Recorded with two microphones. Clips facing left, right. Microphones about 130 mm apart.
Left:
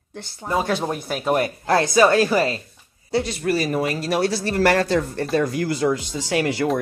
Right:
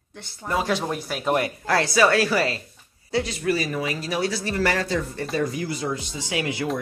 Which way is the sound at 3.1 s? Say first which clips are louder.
Left 2 dB; 40° left (ahead or behind).